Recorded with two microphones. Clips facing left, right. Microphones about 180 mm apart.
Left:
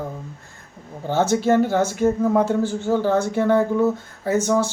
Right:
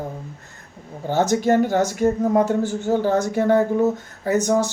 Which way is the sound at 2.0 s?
15° right (ahead or behind).